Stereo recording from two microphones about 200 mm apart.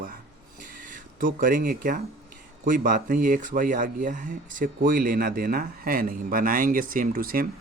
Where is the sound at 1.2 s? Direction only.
45° right (ahead or behind).